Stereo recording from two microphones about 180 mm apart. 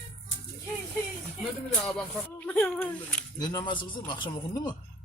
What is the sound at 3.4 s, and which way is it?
Speech, 20° left (ahead or behind).